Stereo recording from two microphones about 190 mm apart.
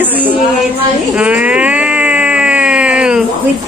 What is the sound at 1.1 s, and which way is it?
Baby cry, 5° right (ahead or behind).